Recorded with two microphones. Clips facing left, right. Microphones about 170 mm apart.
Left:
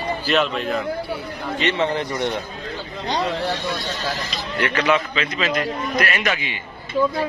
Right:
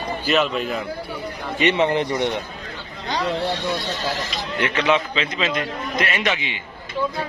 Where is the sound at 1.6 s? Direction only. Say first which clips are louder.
Right 3 dB; 15° right (ahead or behind).